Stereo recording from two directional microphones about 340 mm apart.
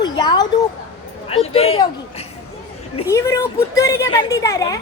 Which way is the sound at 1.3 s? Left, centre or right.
Centre.